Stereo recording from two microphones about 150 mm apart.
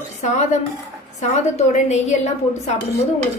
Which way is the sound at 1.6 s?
50° left (ahead or behind).